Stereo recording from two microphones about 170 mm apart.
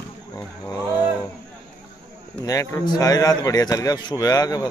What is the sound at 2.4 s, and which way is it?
A man's voice, 20° left (ahead or behind).